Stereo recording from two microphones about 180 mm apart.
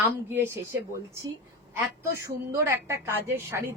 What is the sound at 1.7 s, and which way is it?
Speech, 15° right (ahead or behind).